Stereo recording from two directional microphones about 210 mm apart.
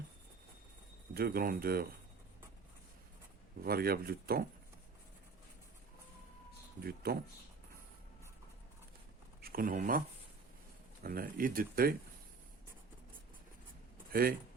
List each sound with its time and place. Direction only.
1.1 s speech: 45° right (ahead or behind)
3.6 s speech: 45° right (ahead or behind)
6.8 s speech: 45° right (ahead or behind)
9.4 s speech: 45° right (ahead or behind)
11.0 s speech: 45° right (ahead or behind)
14.1 s a man's voice: 45° right (ahead or behind)